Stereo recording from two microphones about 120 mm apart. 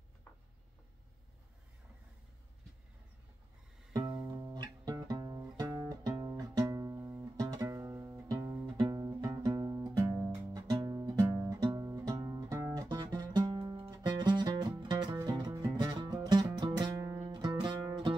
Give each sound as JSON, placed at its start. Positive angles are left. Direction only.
{"t": 3.9, "sound": "music", "side_deg": -40}
{"t": 10.5, "sound": "music", "side_deg": -30}
{"t": 12.8, "sound": "music", "side_deg": -35}
{"t": 17.2, "sound": "music", "side_deg": -40}